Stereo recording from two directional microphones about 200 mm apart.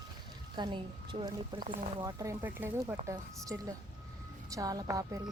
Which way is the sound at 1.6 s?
45° right (ahead or behind).